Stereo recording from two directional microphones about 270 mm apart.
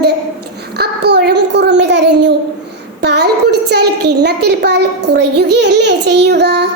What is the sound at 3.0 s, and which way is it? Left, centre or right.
A child's voice, right.